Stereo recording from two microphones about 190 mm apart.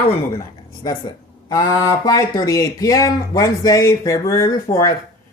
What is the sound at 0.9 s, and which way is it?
Speech, 20° left (ahead or behind).